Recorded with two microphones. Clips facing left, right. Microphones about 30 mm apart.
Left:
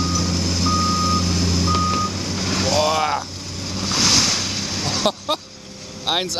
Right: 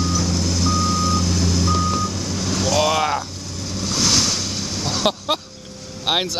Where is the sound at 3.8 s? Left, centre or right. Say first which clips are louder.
Left 1 dB; left.